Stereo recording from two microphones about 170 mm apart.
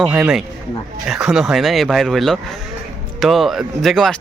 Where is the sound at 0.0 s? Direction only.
5° right (ahead or behind).